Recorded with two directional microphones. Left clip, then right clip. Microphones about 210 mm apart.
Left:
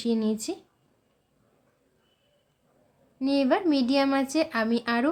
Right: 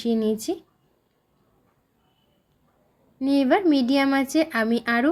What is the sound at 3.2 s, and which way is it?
Speech, 10° right (ahead or behind).